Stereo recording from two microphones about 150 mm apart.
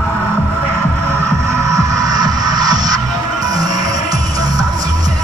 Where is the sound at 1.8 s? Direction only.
25° right (ahead or behind).